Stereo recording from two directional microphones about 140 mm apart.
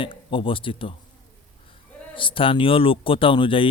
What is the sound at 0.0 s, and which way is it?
Speech, 40° left (ahead or behind).